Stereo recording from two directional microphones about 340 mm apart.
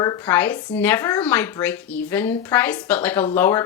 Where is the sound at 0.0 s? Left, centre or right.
Centre.